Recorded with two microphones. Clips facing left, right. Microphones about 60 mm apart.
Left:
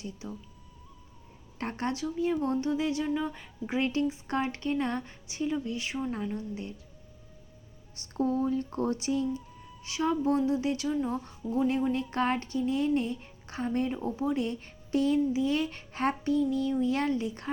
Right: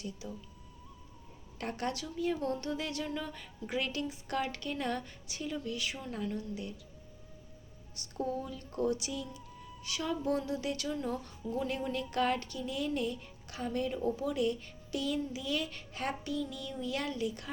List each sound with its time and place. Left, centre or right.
1.5 s speech: left
7.9 s speech: left